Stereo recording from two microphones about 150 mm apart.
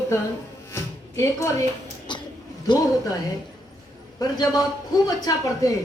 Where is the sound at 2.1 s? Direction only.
30° left (ahead or behind).